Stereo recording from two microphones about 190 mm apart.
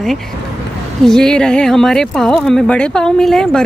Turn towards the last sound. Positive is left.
turn(degrees=5)  # may be behind; listen again after turning